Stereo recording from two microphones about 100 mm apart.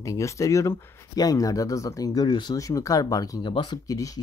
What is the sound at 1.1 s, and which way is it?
Speech, 35° left (ahead or behind).